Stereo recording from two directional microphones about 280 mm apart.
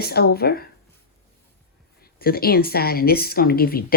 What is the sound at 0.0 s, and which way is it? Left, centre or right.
Speech, left.